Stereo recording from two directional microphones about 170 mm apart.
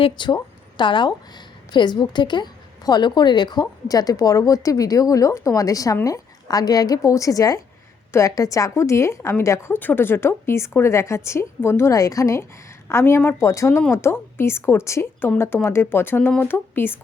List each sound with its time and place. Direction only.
0.0 s a woman's voice: 25° left (ahead or behind)